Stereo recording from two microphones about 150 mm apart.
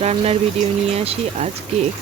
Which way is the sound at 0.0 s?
45° right (ahead or behind).